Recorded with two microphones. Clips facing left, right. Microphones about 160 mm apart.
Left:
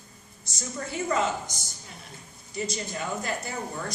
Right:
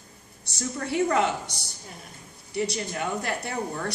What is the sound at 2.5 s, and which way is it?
Speech, 65° right (ahead or behind).